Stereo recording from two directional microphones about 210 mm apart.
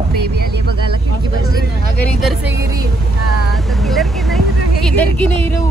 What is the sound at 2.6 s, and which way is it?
Speech, 15° right (ahead or behind).